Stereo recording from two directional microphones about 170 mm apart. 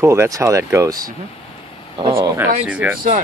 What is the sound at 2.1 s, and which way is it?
Speech, 15° right (ahead or behind).